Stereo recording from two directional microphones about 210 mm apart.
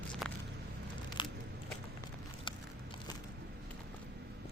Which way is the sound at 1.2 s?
20° left (ahead or behind).